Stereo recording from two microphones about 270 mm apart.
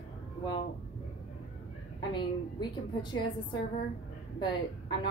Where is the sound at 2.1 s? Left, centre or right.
Centre.